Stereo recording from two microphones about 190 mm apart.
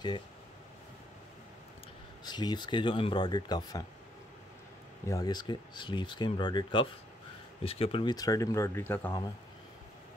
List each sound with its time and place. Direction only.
2.2 s speech: 20° left (ahead or behind)
5.0 s speech: 20° left (ahead or behind)